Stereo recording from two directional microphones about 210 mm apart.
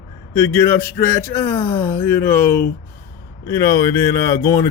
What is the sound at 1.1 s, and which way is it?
Speech, 10° left (ahead or behind).